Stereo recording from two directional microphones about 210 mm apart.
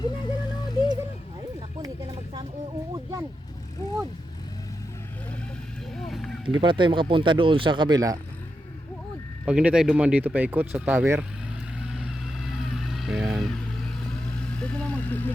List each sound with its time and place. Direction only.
0.0 s music: 20° left (ahead or behind)
2.9 s a sound: 15° right (ahead or behind)
6.0 s a sound: centre (ahead or behind)
6.4 s speech: 25° right (ahead or behind)
9.5 s speech: 5° right (ahead or behind)
11.8 s vehicle: centre (ahead or behind)
14.5 s speech: 5° left (ahead or behind)